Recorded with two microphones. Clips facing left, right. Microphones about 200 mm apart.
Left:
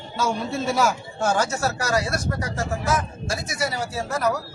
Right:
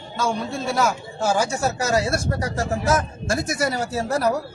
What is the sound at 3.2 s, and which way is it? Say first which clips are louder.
Speech: right 4 dB; 50° right (ahead or behind).